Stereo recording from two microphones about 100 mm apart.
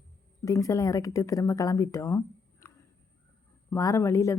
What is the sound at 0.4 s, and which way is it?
Speech, 35° left (ahead or behind).